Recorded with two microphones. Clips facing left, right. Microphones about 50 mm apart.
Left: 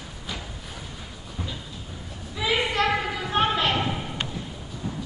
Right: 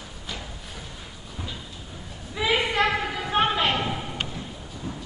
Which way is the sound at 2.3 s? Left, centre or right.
Centre.